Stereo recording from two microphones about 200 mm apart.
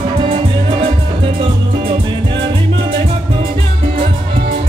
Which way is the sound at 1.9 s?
25° right (ahead or behind).